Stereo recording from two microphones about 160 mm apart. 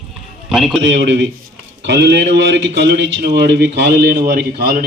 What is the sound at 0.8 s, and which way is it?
A man's voice, 90° right.